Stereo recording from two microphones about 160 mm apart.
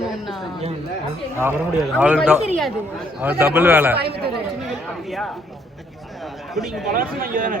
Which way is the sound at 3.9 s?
90° right.